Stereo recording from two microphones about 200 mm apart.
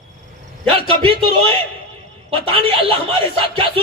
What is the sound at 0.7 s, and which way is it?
A man's voice, 25° right (ahead or behind).